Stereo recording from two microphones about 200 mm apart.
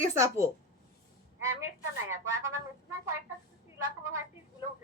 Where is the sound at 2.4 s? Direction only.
15° right (ahead or behind).